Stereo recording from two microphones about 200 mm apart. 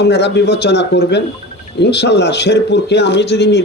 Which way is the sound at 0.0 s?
55° left (ahead or behind).